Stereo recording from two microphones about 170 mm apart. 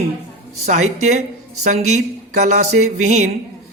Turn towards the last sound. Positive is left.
turn(degrees=-45)  # may be behind; listen again after turning